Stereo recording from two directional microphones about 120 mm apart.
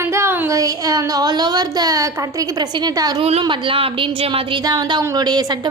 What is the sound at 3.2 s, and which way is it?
Speech, 55° right (ahead or behind).